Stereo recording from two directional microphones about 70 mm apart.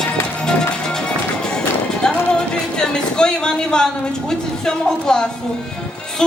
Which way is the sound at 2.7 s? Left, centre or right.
Centre.